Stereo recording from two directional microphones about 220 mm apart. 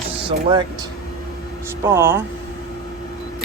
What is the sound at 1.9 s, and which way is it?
Speech, 10° right (ahead or behind).